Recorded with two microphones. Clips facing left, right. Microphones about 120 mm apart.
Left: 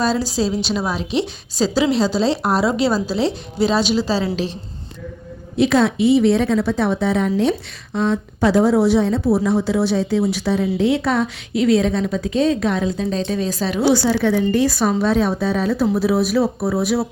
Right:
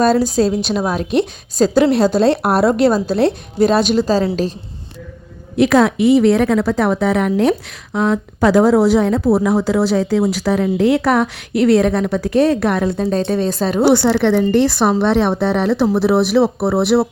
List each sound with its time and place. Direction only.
0.0 s a woman's voice: 55° right (ahead or behind)
6.2 s speech: 70° right (ahead or behind)
7.9 s a woman's voice: 80° right
13.0 s a woman's voice: 50° right (ahead or behind); by 17.1 s 65° right (ahead or behind)